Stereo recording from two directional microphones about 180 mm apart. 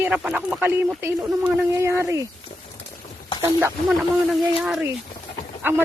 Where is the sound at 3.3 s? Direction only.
15° right (ahead or behind).